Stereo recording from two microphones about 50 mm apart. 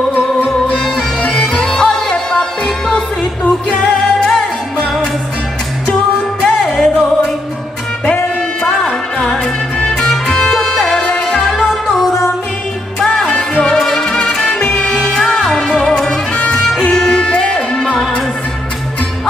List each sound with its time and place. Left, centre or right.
1.2 s music: centre
6.4 s music: centre
8.6 s music: centre
13.0 s music: centre
17.7 s music: centre